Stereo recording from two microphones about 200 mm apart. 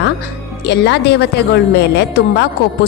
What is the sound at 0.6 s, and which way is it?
A woman's voice, 55° left (ahead or behind).